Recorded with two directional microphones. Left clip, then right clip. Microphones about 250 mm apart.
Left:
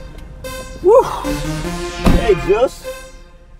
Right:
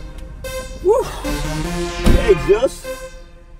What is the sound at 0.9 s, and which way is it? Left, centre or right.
Music, left.